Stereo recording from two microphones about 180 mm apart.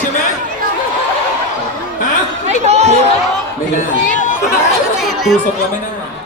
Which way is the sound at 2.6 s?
35° right (ahead or behind).